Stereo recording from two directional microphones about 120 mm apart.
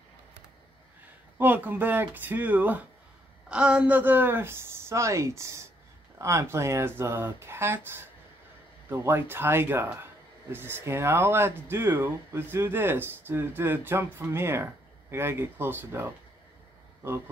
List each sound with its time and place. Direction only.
1.4 s speech: 15° right (ahead or behind)